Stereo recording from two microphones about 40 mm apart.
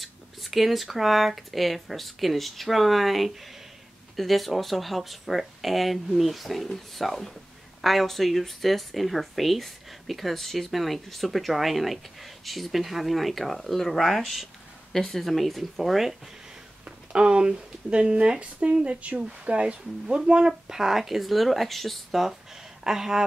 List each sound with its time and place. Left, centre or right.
0.0 s speech: centre
17.1 s speech: right; by 22.2 s centre
22.8 s speech: centre